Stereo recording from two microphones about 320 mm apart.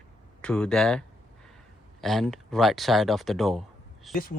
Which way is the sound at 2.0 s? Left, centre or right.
Centre.